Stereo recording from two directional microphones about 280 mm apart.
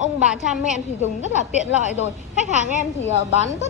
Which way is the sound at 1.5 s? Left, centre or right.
Left.